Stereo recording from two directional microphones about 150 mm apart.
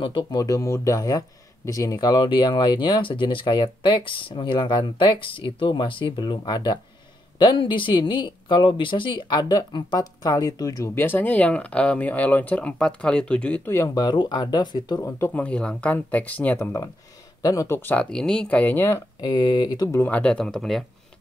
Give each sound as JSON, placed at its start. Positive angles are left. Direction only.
{"t": 0.0, "sound": "speech", "side_deg": 35}
{"t": 15.0, "sound": "speech", "side_deg": 15}
{"t": 19.2, "sound": "speech", "side_deg": 30}
{"t": 19.9, "sound": "speech", "side_deg": 10}